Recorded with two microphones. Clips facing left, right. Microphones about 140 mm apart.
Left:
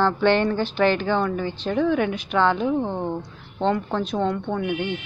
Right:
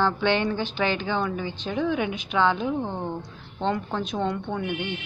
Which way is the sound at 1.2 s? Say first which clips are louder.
Left 4 dB; 10° right (ahead or behind).